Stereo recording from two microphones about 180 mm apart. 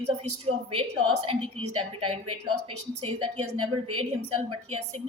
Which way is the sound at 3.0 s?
35° right (ahead or behind).